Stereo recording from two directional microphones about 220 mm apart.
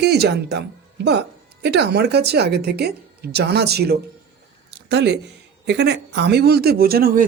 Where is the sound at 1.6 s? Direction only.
50° right (ahead or behind).